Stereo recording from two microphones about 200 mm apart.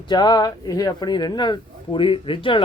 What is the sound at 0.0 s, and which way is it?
Speech, 20° left (ahead or behind).